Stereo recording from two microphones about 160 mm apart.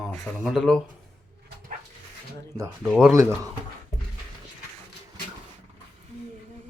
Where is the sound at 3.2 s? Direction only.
20° right (ahead or behind).